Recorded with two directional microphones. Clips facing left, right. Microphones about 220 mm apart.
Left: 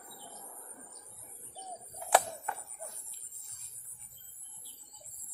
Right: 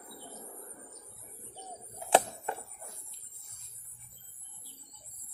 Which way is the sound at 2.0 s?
25° right (ahead or behind).